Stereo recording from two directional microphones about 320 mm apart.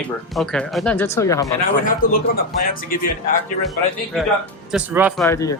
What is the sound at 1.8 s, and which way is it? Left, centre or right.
A man's voice, left.